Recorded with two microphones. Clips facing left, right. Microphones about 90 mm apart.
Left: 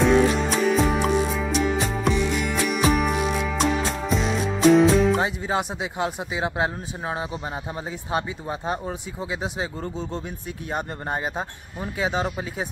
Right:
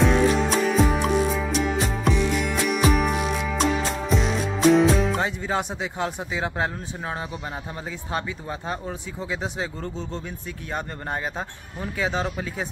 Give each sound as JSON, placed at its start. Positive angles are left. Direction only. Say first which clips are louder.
{"t": 0.0, "sound": "music", "louder": "left 1 dB", "side_deg": 0}
{"t": 8.1, "sound": "a man's voice", "louder": "left 3 dB", "side_deg": 15}